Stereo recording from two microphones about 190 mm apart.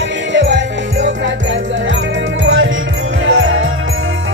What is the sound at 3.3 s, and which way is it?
Jingle bell, 90° right.